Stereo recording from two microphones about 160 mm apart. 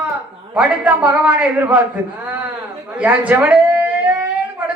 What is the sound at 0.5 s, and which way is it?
A woman's voice, 10° right (ahead or behind).